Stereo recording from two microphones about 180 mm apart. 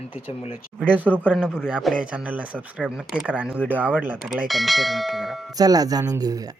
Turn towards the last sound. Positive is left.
turn(degrees=-20)  # may be behind; listen again after turning